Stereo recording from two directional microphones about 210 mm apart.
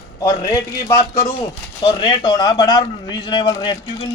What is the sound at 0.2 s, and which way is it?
A man's voice, 15° left (ahead or behind).